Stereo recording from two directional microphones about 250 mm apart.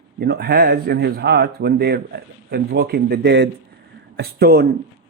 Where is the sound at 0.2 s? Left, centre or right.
Right.